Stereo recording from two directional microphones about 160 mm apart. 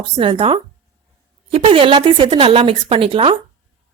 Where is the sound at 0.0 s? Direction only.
35° right (ahead or behind).